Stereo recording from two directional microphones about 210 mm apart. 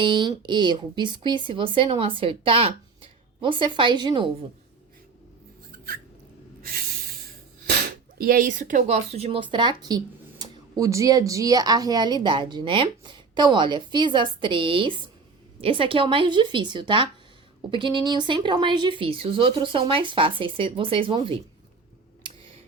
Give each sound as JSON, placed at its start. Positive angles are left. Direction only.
{"t": 0.0, "sound": "speech", "side_deg": -20}
{"t": 6.6, "sound": "a sound", "side_deg": -45}
{"t": 8.2, "sound": "speech", "side_deg": -40}